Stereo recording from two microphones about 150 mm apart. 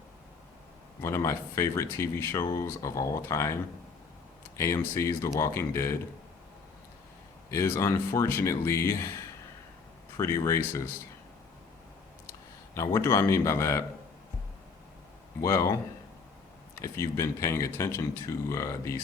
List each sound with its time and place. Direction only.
1.0 s speech: 20° left (ahead or behind)
7.5 s speech: 20° left (ahead or behind)
12.7 s speech: 20° left (ahead or behind)
15.4 s speech: 20° left (ahead or behind)
16.8 s speech: 20° left (ahead or behind)